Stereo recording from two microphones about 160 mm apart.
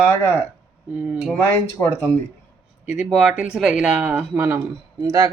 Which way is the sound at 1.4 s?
10° left (ahead or behind).